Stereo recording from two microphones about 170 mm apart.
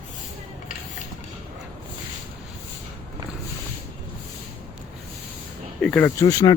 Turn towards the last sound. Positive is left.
turn(degrees=20)  # may be behind; listen again after turning